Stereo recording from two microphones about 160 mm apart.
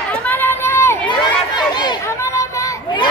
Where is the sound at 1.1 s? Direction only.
30° left (ahead or behind).